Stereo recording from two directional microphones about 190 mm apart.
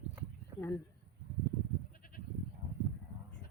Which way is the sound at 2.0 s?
50° left (ahead or behind).